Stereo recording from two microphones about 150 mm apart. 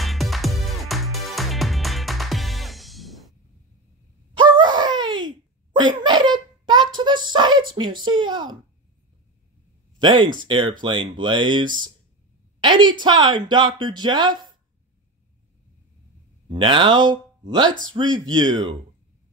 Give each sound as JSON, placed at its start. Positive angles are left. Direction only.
{"t": 0.0, "sound": "music", "side_deg": 0}
{"t": 4.3, "sound": "groan", "side_deg": -30}
{"t": 5.8, "sound": "a sound", "side_deg": -30}
{"t": 7.7, "sound": "speech", "side_deg": -30}
{"t": 9.9, "sound": "a woman's voice", "side_deg": -30}
{"t": 16.4, "sound": "speech", "side_deg": -35}